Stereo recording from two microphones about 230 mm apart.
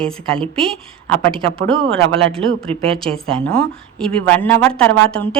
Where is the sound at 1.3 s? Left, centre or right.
Right.